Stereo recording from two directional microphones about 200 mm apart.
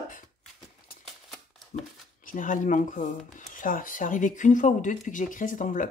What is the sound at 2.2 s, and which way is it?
Speech, 40° left (ahead or behind).